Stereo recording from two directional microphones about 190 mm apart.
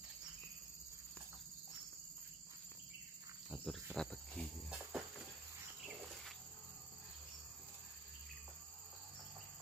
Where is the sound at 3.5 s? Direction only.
5° right (ahead or behind).